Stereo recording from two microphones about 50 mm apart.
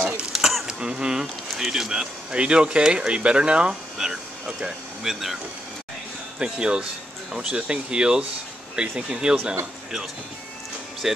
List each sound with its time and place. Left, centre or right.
0.2 s a sound: centre
0.7 s honk: centre
1.5 s speech: centre
2.3 s speech: right
4.0 s vehicle: centre
4.5 s speech: centre
5.0 s speech: centre
6.4 s speech: centre
11.0 s speech: centre